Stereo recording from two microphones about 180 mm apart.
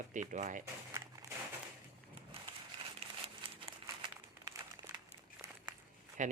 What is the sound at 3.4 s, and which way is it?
Crumpling, 30° right (ahead or behind).